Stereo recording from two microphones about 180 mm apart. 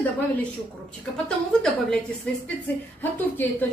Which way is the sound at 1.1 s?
5° left (ahead or behind).